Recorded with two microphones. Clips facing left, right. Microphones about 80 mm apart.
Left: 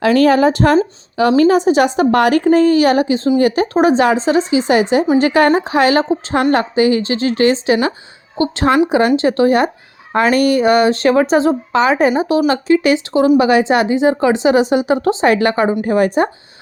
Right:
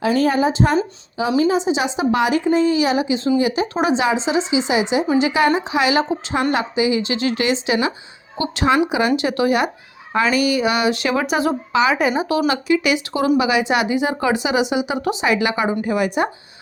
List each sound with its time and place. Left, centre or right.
0.0 s a woman's voice: left
10.2 s speech: left
14.4 s a woman's voice: left